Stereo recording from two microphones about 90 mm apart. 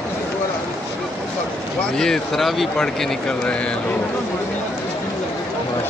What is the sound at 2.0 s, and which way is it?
Speech, 5° left (ahead or behind).